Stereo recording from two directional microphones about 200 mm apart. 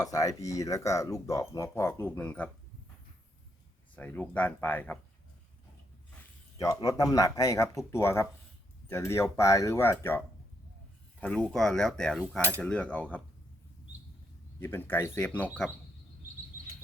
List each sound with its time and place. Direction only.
0.0 s speech: 15° left (ahead or behind)
3.9 s speech: 5° left (ahead or behind)
6.6 s speech: 15° left (ahead or behind)
14.6 s speech: 10° left (ahead or behind)